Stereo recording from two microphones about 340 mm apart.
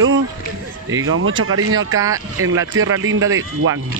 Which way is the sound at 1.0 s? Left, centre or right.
Right.